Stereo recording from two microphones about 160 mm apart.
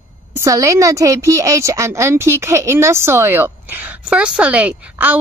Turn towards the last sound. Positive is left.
turn(degrees=-10)  # may be behind; listen again after turning